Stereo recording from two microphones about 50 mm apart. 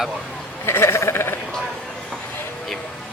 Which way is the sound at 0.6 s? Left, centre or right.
Left.